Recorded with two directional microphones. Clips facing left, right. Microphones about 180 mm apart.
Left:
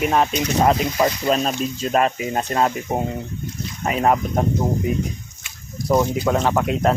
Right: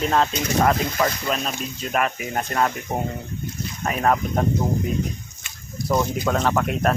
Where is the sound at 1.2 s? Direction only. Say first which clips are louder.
Left 6 dB; 35° left (ahead or behind); by 4.4 s 15° left (ahead or behind).